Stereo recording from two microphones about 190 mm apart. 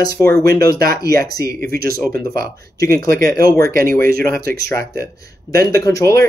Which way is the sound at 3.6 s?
50° right (ahead or behind).